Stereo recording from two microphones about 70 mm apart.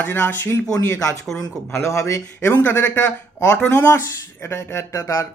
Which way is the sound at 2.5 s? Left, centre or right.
Left.